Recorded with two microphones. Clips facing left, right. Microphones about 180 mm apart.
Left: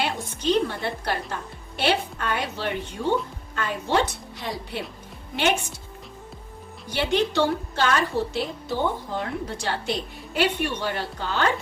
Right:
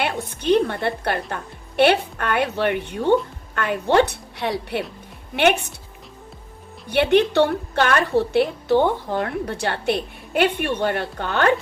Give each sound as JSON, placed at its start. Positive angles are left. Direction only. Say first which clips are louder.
{"t": 0.0, "sound": "a woman's voice", "louder": "right 2 dB", "side_deg": -60}
{"t": 6.9, "sound": "a woman's voice", "louder": "right 7 dB", "side_deg": -60}